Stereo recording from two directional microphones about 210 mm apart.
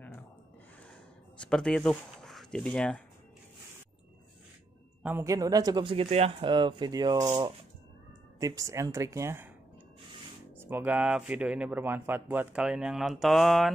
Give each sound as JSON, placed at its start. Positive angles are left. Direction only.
{"t": 1.4, "sound": "speech", "side_deg": 0}
{"t": 5.0, "sound": "speech", "side_deg": -10}
{"t": 10.6, "sound": "speech", "side_deg": -10}